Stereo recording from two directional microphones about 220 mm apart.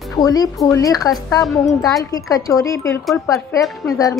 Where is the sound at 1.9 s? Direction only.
15° left (ahead or behind).